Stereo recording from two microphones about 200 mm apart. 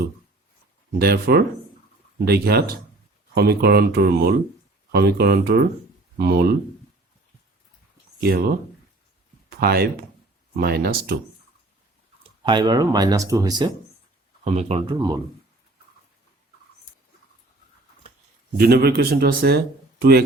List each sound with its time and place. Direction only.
0.9 s speech: 50° right (ahead or behind)
8.2 s speech: 50° right (ahead or behind)
9.6 s speech: 50° right (ahead or behind)
12.5 s speech: 20° right (ahead or behind)
14.4 s speech: 30° right (ahead or behind)
14.9 s speech: 15° right (ahead or behind)
18.5 s speech: 50° right (ahead or behind)